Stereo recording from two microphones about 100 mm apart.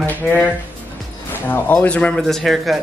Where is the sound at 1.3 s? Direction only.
20° left (ahead or behind).